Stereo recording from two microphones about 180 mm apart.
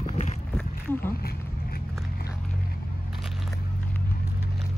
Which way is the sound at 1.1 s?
60° left (ahead or behind).